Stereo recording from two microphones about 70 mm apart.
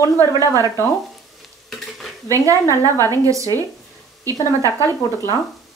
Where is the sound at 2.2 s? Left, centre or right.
Right.